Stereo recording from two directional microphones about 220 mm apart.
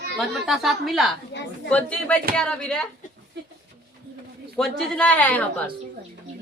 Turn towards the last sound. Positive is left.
turn(degrees=5)  # may be behind; listen again after turning